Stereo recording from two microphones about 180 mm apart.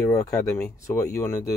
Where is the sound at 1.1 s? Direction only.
15° left (ahead or behind).